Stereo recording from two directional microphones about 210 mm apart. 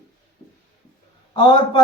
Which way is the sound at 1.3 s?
20° left (ahead or behind).